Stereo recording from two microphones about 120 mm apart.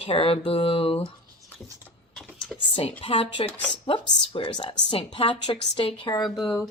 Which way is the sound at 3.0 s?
50° left (ahead or behind).